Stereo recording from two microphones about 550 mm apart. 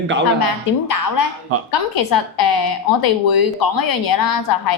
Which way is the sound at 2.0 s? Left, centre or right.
Left.